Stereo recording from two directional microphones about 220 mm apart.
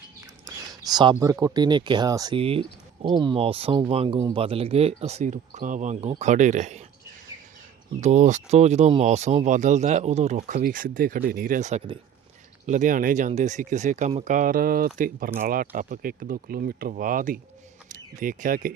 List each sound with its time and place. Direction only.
0.2 s a sound: 15° right (ahead or behind)
1.2 s speech: 15° right (ahead or behind); by 6.8 s 30° right (ahead or behind)
8.0 s speech: 35° right (ahead or behind)